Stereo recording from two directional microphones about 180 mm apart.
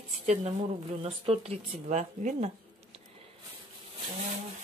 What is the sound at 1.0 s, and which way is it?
Speech, 35° right (ahead or behind).